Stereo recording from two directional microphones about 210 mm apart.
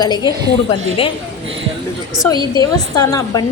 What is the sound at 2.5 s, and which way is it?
Speech, 15° left (ahead or behind).